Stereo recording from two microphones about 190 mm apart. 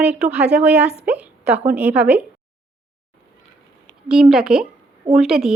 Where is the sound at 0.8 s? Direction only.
35° right (ahead or behind).